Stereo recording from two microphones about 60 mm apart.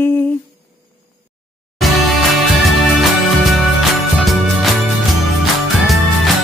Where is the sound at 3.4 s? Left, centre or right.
Centre.